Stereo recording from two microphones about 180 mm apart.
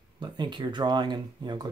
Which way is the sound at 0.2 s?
25° right (ahead or behind).